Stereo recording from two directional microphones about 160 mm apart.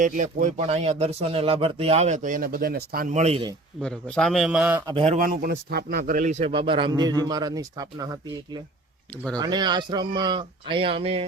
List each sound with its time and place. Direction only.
0.0 s speech: 50° right (ahead or behind)
3.2 s a man's voice: 40° right (ahead or behind)
3.8 s a man's voice: 5° left (ahead or behind)
5.0 s speech: 55° right (ahead or behind)
6.5 s a man's voice: 30° right (ahead or behind)